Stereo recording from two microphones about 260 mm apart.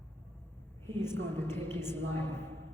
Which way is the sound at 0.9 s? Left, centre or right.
Centre.